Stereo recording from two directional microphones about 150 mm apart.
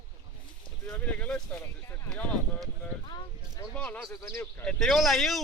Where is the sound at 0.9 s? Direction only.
10° left (ahead or behind).